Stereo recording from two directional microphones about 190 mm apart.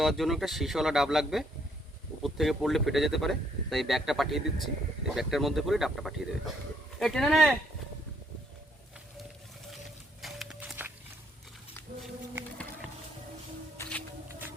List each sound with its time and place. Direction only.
0.0 s speech: centre (ahead or behind)
10.2 s a sound: centre (ahead or behind)
13.8 s music: 15° left (ahead or behind)